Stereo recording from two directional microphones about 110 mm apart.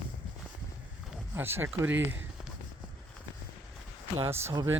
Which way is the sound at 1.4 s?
20° right (ahead or behind).